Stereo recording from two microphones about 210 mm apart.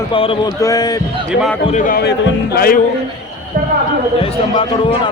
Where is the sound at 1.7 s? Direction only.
40° left (ahead or behind).